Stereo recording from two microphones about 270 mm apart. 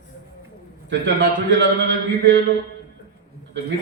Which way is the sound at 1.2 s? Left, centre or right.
Right.